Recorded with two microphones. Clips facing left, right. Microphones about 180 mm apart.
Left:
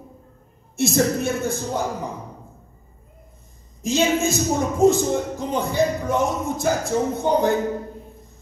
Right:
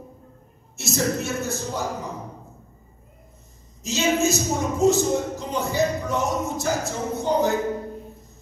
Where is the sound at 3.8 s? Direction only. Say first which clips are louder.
Left 2 dB; 55° left (ahead or behind).